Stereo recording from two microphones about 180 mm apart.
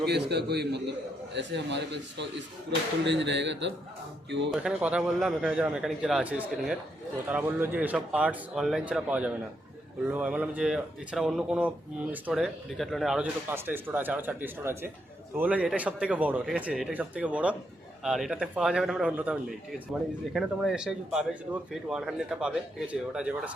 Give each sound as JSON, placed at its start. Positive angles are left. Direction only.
{"t": 0.0, "sound": "a man's voice", "side_deg": -65}
{"t": 4.5, "sound": "speech", "side_deg": -5}